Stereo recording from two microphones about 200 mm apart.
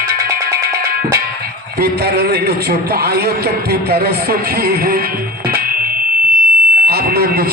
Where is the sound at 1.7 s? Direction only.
50° right (ahead or behind).